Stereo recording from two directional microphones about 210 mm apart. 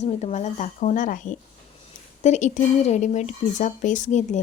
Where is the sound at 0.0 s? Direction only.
30° left (ahead or behind).